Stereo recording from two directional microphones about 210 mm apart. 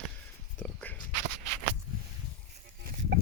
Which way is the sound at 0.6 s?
10° left (ahead or behind).